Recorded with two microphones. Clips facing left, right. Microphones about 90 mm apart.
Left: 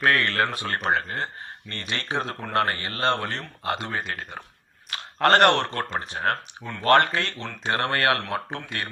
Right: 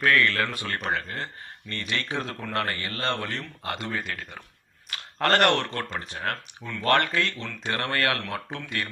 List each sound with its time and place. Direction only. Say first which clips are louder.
0.0 s speech: left 1 dB; 40° left (ahead or behind)
3.6 s speech: left 5 dB; 30° left (ahead or behind)
3.9 s speech: left 2 dB; 40° left (ahead or behind)